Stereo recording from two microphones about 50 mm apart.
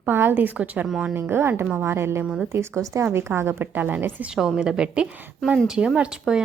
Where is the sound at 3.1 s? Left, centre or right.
Right.